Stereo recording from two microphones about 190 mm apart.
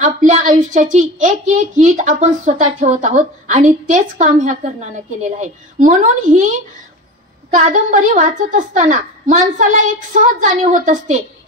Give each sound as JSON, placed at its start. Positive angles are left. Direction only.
{"t": 0.0, "sound": "a woman's voice", "side_deg": -40}
{"t": 7.5, "sound": "a woman's voice", "side_deg": -45}